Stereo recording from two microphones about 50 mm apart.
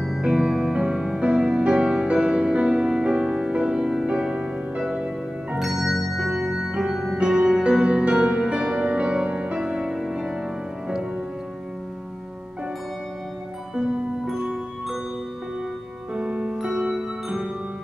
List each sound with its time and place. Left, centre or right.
0.2 s music: centre
7.2 s music: centre
14.3 s music: centre
16.2 s music: right